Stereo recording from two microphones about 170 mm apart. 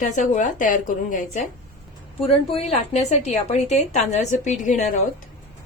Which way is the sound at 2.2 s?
35° left (ahead or behind).